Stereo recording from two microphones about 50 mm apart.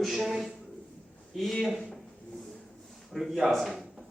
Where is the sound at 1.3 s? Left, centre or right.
Centre.